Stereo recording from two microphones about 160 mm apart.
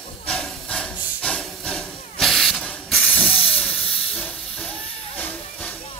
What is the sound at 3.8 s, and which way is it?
Hiss, 35° left (ahead or behind).